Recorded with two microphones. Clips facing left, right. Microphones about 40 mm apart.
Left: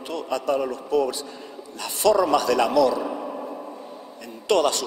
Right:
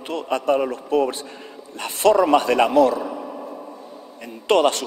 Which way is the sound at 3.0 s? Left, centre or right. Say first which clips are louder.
Even; centre.